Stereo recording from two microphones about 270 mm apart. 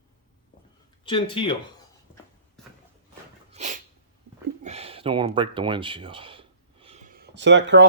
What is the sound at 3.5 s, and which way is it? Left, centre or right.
Sneeze, right.